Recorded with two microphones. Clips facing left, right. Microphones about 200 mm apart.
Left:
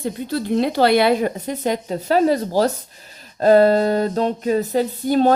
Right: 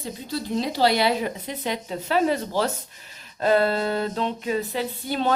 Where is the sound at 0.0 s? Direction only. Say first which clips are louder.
Left 7 dB; 55° left (ahead or behind).